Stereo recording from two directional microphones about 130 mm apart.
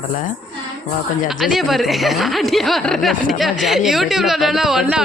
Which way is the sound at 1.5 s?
Centre (ahead or behind).